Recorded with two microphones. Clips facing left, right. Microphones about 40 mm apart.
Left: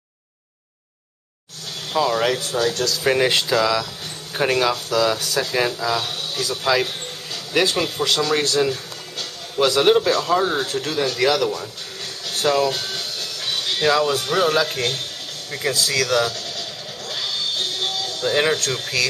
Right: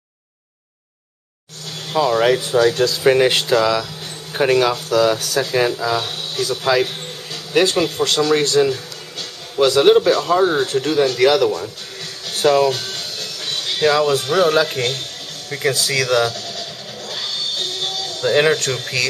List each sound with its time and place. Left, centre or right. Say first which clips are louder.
1.9 s speech: right 4 dB; centre; by 3.0 s right
3.0 s speech: right 3 dB; centre
12.8 s music: even; centre